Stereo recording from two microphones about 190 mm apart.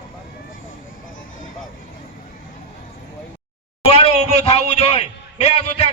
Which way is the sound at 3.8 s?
30° left (ahead or behind).